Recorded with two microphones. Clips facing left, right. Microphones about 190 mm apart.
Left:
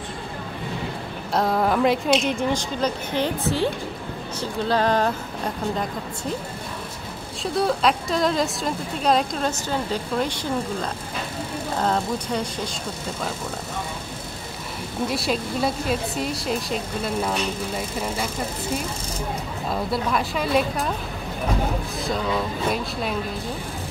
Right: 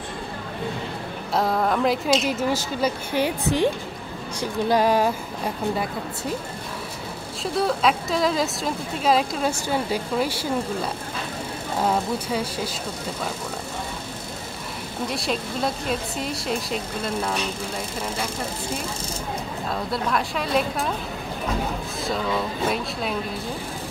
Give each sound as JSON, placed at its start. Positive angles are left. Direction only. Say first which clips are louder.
{"t": 1.3, "sound": "a woman's voice", "louder": "left 1 dB", "side_deg": 0}
{"t": 7.5, "sound": "a woman's voice", "louder": "left 1 dB", "side_deg": 0}
{"t": 15.0, "sound": "a woman's voice", "louder": "left 2 dB", "side_deg": 0}
{"t": 19.7, "sound": "a woman's voice", "louder": "left 2 dB", "side_deg": 0}
{"t": 22.0, "sound": "a woman's voice", "louder": "even", "side_deg": 0}